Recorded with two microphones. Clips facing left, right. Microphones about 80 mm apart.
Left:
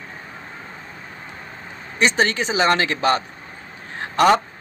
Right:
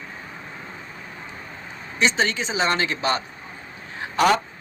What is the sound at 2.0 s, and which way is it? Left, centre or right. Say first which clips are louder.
A man's voice: left 3 dB; left.